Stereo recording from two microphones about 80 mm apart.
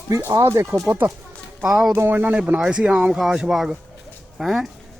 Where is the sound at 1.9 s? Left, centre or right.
Right; by 4.6 s centre.